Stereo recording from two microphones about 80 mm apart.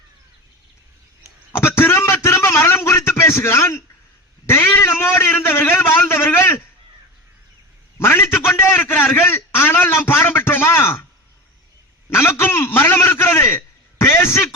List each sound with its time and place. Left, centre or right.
1.5 s a sound: left
4.4 s a man's voice: left
7.9 s a man's voice: left
12.1 s a man's voice: left